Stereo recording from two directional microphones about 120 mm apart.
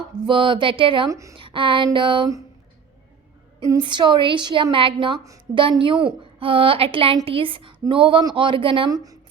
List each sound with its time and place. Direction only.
0.3 s a woman's voice: 45° right (ahead or behind)
1.1 s a woman's voice: 25° right (ahead or behind)
1.4 s a woman's voice: 45° right (ahead or behind)
3.8 s a woman's voice: 40° right (ahead or behind)